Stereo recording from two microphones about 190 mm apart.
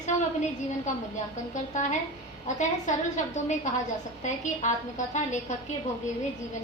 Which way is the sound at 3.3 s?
40° left (ahead or behind).